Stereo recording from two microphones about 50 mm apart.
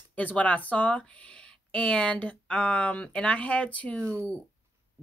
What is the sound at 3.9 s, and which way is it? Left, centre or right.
Speech, right.